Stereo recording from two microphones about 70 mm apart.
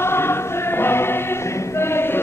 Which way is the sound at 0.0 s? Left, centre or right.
Left.